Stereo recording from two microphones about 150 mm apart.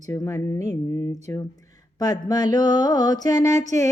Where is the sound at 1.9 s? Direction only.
25° left (ahead or behind).